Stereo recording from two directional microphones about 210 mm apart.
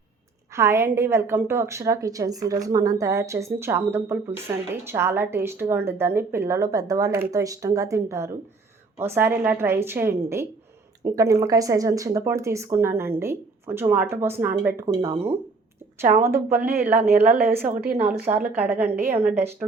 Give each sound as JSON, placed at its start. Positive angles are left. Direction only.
{"t": 0.5, "sound": "a woman's voice", "side_deg": -15}
{"t": 16.8, "sound": "a woman's voice", "side_deg": -5}
{"t": 17.1, "sound": "a woman's voice", "side_deg": -45}
{"t": 18.3, "sound": "a woman's voice", "side_deg": -10}